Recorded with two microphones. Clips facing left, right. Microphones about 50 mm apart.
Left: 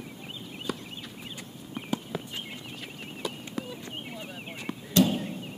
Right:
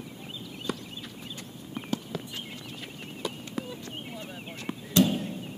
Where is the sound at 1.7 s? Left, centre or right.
Centre.